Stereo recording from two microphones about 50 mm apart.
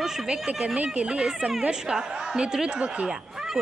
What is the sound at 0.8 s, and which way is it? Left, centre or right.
A woman's voice, right.